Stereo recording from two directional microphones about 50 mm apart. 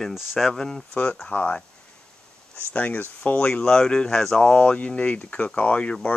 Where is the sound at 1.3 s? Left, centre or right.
Left.